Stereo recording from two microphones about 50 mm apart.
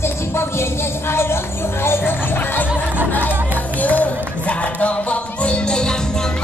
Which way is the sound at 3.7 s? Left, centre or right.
Left.